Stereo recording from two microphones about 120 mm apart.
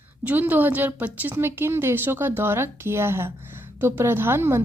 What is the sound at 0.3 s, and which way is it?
A woman's voice, 15° right (ahead or behind).